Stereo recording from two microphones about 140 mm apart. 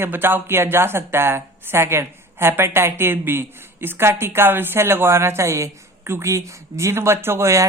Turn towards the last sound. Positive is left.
turn(degrees=-20)  # may be behind; listen again after turning